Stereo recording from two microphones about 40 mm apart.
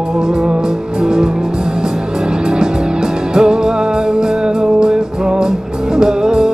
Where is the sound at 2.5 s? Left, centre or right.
Centre.